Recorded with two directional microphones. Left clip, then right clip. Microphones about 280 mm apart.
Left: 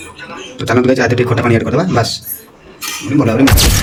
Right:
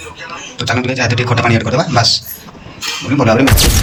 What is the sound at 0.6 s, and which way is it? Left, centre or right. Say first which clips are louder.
A man's voice: left 4 dB; centre.